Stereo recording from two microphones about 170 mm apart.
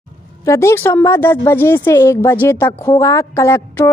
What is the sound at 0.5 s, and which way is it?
Speech, 15° left (ahead or behind).